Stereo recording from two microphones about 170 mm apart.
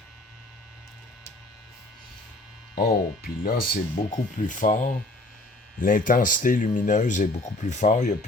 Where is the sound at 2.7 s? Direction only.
60° left (ahead or behind).